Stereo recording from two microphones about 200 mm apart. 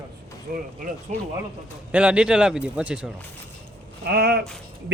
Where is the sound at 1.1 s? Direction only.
35° right (ahead or behind).